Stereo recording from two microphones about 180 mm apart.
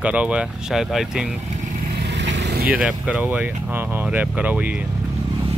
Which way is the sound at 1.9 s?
70° right (ahead or behind).